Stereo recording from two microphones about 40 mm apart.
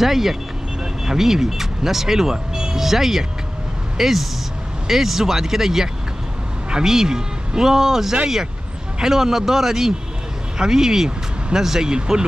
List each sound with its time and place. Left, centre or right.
0.0 s speech: centre